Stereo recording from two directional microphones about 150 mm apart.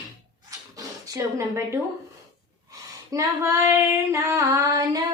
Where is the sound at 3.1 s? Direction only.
20° right (ahead or behind).